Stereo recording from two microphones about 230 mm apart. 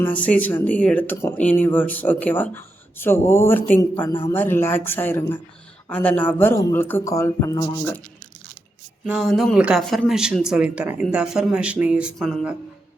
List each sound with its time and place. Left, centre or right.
0.0 s speech: centre
9.0 s speech: centre